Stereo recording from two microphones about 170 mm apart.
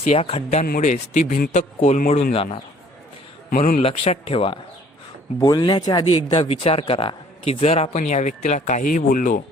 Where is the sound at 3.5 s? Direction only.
50° left (ahead or behind).